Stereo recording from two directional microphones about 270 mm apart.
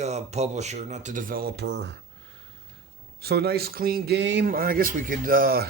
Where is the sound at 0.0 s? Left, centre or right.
Right.